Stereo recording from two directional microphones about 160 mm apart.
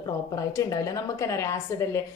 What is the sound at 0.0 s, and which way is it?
A woman's voice, 20° left (ahead or behind).